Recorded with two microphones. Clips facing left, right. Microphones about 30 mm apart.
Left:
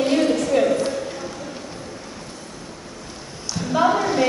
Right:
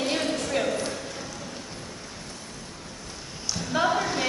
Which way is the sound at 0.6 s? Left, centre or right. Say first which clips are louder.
Left 7 dB; centre.